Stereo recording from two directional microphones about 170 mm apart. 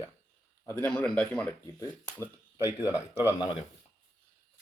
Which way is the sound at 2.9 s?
10° right (ahead or behind).